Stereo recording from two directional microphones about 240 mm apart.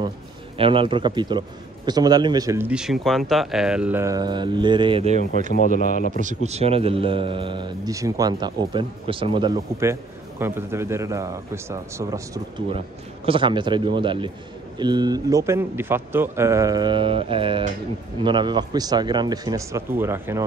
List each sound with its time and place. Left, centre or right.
0.6 s a man's voice: right